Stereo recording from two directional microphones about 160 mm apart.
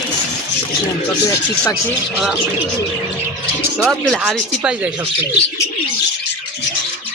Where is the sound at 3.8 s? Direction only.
Centre (ahead or behind).